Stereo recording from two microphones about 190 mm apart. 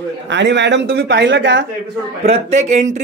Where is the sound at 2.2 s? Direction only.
35° right (ahead or behind).